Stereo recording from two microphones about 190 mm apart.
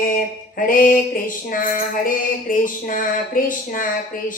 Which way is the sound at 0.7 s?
45° left (ahead or behind).